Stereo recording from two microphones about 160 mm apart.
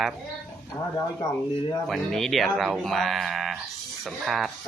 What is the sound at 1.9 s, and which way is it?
Speech, centre (ahead or behind).